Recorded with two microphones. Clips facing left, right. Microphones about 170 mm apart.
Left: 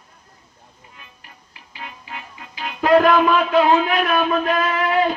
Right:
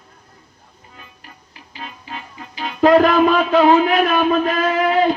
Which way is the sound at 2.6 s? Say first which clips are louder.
Right 3 dB; 35° right (ahead or behind).